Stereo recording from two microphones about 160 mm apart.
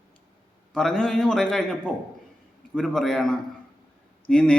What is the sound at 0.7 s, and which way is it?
A man's voice, 5° left (ahead or behind).